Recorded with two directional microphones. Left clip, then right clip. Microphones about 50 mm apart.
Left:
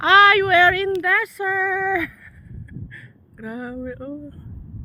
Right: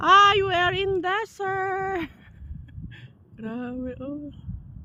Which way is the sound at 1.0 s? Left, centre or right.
Left.